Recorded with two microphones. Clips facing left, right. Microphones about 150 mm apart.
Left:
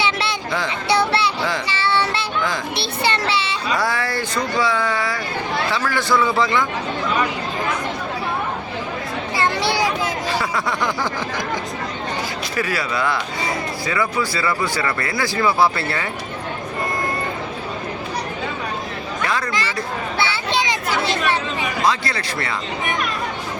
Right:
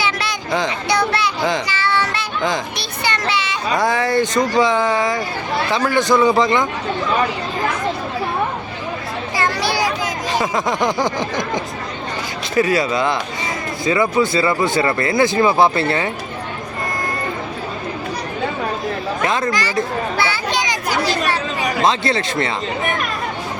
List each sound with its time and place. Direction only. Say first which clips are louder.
0.0 s a sound: even; 30° left (ahead or behind)
0.9 s a child's voice: left 3 dB; 30° left (ahead or behind)
1.6 s child singing: even; 30° left (ahead or behind)
2.7 s a child's voice: left 2 dB; 30° left (ahead or behind)
3.8 s speech: right 8 dB; 20° right (ahead or behind)
9.3 s children playing: even; 25° left (ahead or behind)
10.3 s speech: right 4 dB; 20° right (ahead or behind)
12.5 s speech: right 7 dB; 25° right (ahead or behind)
19.2 s chatter: right 3 dB; 20° right (ahead or behind)
19.5 s a child's voice: right 4 dB; 25° left (ahead or behind)
20.1 s a sound: left 2 dB; 25° left (ahead or behind)
21.8 s speech: right 4 dB; 25° right (ahead or behind)